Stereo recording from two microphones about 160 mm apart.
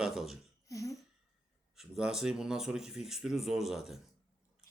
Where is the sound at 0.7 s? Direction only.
20° left (ahead or behind).